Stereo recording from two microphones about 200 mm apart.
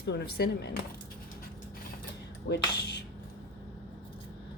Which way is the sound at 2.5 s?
55° left (ahead or behind).